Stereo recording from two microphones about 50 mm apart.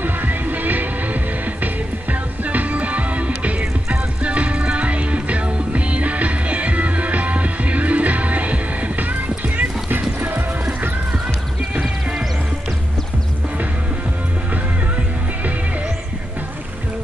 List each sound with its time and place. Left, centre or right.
0.0 s music: right
2.4 s music: right
9.6 s music: right